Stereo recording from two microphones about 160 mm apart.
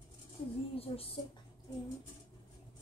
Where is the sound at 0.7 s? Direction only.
35° left (ahead or behind).